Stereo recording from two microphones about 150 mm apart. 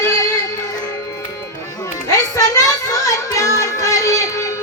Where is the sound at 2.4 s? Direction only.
25° left (ahead or behind).